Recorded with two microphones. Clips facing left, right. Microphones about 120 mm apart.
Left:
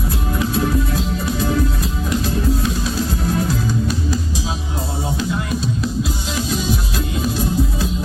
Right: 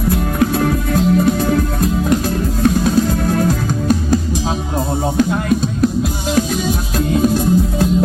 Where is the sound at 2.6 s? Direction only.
55° right (ahead or behind).